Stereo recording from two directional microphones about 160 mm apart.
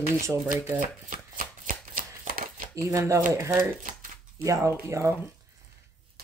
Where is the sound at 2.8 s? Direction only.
20° right (ahead or behind).